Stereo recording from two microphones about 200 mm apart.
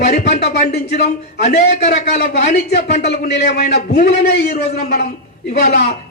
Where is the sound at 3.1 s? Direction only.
55° left (ahead or behind).